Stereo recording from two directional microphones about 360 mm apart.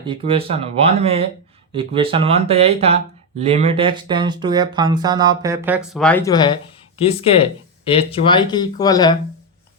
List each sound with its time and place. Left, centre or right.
0.0 s speech: centre